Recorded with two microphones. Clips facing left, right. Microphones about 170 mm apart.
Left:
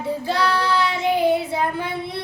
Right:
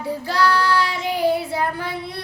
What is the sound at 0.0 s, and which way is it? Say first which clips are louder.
Child singing: right 1 dB; 20° left (ahead or behind).